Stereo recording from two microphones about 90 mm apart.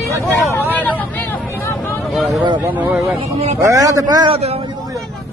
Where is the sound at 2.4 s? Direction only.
60° right (ahead or behind).